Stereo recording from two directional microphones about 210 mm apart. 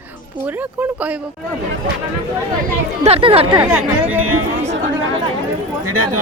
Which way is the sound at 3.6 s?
10° right (ahead or behind).